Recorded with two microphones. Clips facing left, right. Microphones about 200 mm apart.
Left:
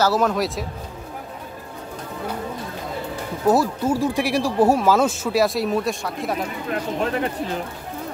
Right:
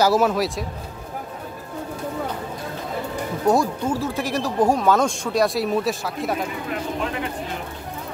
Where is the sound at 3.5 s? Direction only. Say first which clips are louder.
Left 2 dB; 5° left (ahead or behind).